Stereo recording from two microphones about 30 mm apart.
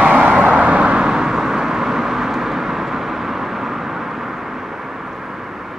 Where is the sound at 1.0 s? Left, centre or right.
Right.